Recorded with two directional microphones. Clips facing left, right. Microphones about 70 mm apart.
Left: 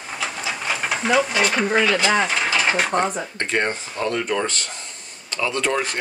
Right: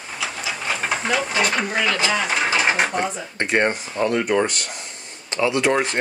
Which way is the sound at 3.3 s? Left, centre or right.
Centre.